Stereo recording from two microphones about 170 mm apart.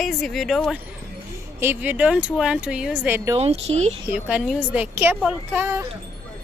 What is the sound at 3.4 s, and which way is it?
Speech, 35° right (ahead or behind).